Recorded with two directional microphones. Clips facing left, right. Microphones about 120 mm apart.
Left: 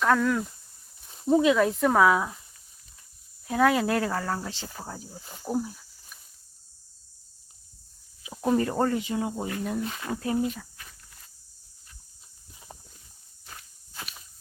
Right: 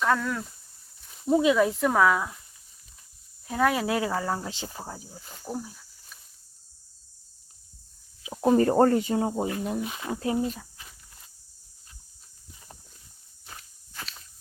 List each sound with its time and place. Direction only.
0.0 s speech: centre (ahead or behind)
1.4 s speech: 10° right (ahead or behind)
1.8 s speech: 5° left (ahead or behind)
3.4 s speech: centre (ahead or behind)
5.1 s speech: 15° left (ahead or behind)
8.2 s a sound: 15° right (ahead or behind)
8.5 s speech: 40° right (ahead or behind)
9.4 s speech: 20° right (ahead or behind)
10.6 s walk: 15° right (ahead or behind)
13.6 s walk: 15° left (ahead or behind)